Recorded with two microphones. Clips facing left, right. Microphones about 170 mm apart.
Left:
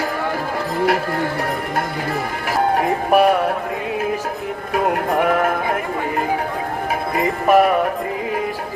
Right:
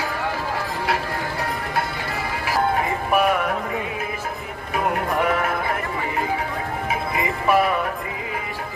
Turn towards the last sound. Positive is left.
turn(degrees=45)  # may be behind; listen again after turning